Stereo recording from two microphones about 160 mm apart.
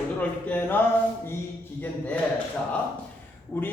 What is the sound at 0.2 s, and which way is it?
Speech, 10° left (ahead or behind).